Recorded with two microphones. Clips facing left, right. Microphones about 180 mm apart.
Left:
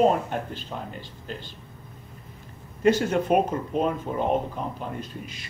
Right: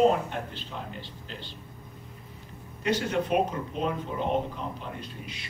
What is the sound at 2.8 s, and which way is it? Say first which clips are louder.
Speech: left 6 dB; 50° left (ahead or behind).